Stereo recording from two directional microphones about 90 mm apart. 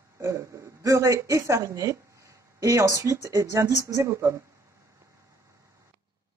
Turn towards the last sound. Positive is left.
turn(degrees=-30)  # may be behind; listen again after turning